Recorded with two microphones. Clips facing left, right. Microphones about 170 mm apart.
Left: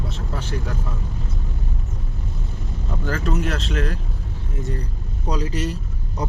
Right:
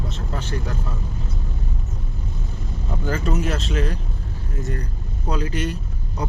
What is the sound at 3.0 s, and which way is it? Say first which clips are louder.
Speech: even; 5° right (ahead or behind).